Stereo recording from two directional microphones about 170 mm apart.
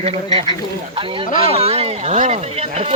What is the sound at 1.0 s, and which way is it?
Speech, 30° right (ahead or behind).